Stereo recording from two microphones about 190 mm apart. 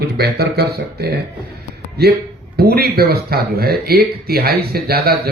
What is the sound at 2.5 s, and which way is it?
Speech, 55° right (ahead or behind).